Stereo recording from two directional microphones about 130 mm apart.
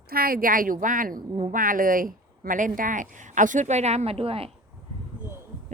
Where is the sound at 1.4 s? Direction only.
75° right (ahead or behind); by 4.5 s 45° right (ahead or behind).